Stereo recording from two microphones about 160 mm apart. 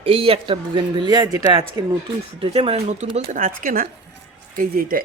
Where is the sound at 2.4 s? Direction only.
35° right (ahead or behind); by 5.0 s 60° right (ahead or behind).